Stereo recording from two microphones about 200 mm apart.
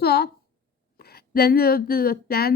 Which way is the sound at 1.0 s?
50° left (ahead or behind).